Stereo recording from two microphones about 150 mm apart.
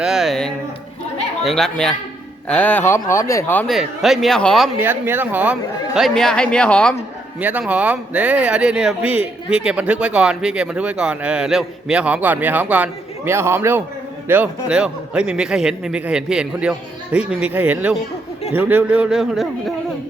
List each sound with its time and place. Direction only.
0.0 s speech: centre (ahead or behind); by 3.7 s 15° left (ahead or behind)
3.7 s speech: centre (ahead or behind)
4.8 s speech: 15° right (ahead or behind); by 6.9 s 5° left (ahead or behind)
7.3 s speech: 10° right (ahead or behind)